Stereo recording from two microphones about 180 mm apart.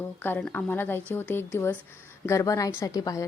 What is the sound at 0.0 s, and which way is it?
A woman's voice, 10° left (ahead or behind).